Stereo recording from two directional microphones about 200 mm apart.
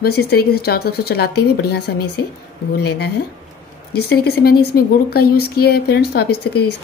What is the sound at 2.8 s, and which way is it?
Speech, 55° left (ahead or behind).